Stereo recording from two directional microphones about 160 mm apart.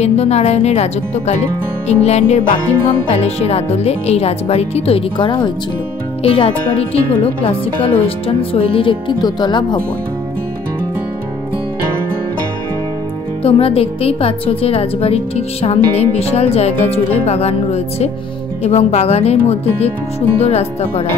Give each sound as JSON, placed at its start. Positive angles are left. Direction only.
{"t": 0.0, "sound": "speech", "side_deg": 40}
{"t": 8.4, "sound": "speech", "side_deg": 35}
{"t": 13.4, "sound": "speech", "side_deg": 35}